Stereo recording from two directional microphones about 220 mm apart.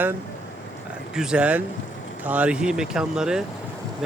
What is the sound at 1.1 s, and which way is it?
Speech, 5° right (ahead or behind).